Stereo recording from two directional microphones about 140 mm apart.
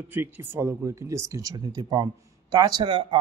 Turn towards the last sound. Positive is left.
turn(degrees=-35)  # may be behind; listen again after turning